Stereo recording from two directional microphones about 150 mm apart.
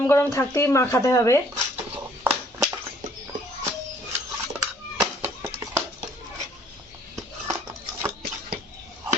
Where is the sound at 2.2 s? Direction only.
15° right (ahead or behind).